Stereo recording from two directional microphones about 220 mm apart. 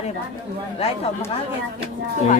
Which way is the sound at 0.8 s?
25° left (ahead or behind).